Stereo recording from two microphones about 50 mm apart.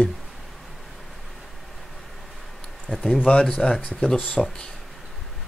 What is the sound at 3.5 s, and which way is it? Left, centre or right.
Speech, centre.